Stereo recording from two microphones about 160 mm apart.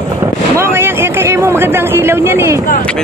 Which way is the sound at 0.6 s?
15° right (ahead or behind).